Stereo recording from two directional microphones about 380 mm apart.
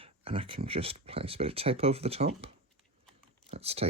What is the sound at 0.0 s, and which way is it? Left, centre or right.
Speech, centre.